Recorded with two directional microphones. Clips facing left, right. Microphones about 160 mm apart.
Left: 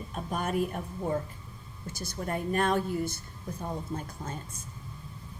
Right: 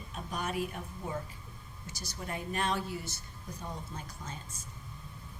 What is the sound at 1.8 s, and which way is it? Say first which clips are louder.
A woman's voice: left 7 dB; 55° left (ahead or behind).